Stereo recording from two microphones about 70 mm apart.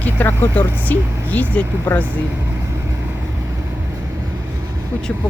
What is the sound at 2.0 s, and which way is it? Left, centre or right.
Speech, right.